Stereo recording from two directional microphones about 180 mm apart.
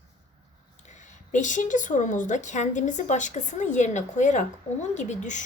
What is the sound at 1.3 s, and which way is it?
Speech, 45° left (ahead or behind).